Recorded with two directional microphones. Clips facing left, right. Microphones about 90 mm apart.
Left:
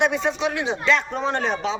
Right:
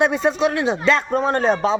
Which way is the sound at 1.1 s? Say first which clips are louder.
Right 6 dB; 45° right (ahead or behind).